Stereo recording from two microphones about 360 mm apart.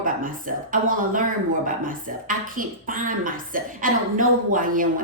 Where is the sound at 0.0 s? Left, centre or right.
Right.